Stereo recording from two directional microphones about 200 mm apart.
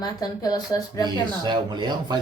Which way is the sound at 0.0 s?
20° left (ahead or behind).